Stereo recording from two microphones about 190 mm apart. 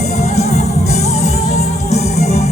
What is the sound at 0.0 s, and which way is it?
Music, 35° left (ahead or behind).